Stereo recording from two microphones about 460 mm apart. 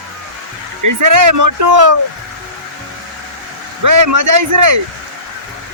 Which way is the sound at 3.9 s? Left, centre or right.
Right.